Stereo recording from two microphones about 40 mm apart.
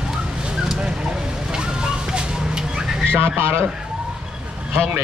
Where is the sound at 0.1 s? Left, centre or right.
Centre.